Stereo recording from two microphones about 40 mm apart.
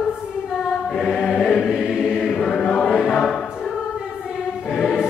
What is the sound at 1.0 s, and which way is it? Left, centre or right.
Chant, centre.